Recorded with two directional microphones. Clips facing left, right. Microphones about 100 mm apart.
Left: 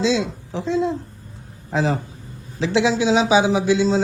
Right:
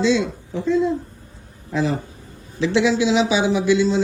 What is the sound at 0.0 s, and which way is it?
A man's voice, 90° left.